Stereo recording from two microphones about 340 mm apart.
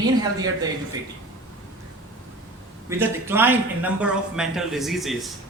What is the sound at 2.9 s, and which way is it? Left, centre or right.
A man's voice, centre.